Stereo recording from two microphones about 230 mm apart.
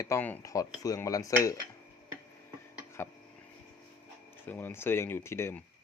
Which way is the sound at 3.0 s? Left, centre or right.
Centre.